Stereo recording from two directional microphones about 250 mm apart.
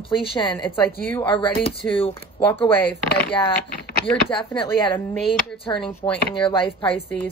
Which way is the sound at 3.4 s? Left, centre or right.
Centre.